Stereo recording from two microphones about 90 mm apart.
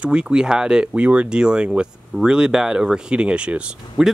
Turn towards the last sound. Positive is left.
turn(degrees=-10)  # may be behind; listen again after turning